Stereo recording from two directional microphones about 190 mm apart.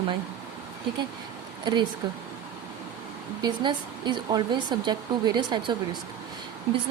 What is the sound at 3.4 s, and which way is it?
Speech, 25° right (ahead or behind).